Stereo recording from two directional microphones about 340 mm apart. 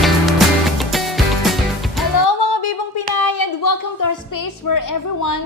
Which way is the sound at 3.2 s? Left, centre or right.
Left.